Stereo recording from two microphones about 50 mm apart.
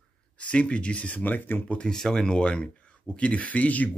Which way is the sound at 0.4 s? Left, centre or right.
Left.